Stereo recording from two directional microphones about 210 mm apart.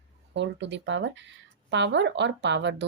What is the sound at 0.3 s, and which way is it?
Speech, 55° right (ahead or behind).